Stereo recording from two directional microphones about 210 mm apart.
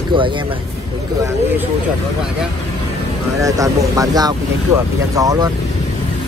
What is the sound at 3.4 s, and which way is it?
Speech, 15° right (ahead or behind).